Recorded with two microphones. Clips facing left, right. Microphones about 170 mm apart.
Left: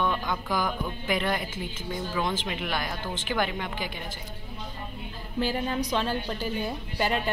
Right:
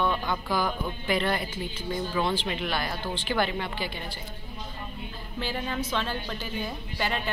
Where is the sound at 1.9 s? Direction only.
10° left (ahead or behind).